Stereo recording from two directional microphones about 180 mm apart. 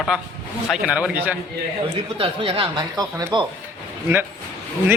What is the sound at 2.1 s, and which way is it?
A man's voice, 30° right (ahead or behind).